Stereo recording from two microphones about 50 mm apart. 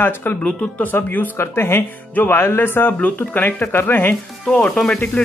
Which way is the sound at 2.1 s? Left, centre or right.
Left.